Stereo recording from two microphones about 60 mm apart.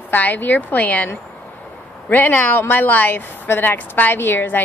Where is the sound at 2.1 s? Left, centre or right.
Left.